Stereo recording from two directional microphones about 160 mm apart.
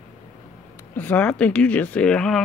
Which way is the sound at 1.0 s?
10° left (ahead or behind).